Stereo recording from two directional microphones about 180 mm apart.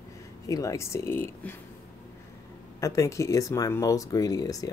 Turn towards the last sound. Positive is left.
turn(degrees=20)  # may be behind; listen again after turning